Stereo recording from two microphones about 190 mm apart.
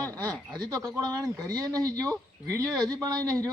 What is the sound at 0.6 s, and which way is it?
A man's voice, 20° right (ahead or behind).